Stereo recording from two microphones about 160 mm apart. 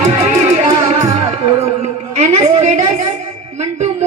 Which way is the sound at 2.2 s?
45° right (ahead or behind).